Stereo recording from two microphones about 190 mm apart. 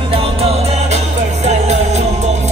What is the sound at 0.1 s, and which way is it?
Music, 30° right (ahead or behind).